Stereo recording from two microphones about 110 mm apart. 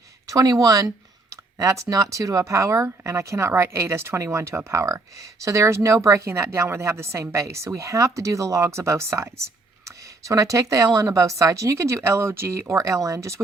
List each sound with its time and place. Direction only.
0.3 s speech: 30° right (ahead or behind)